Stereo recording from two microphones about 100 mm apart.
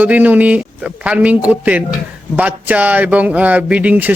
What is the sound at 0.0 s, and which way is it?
Speech, 15° right (ahead or behind).